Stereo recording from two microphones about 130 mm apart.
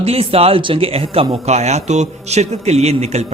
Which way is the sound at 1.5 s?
60° right (ahead or behind).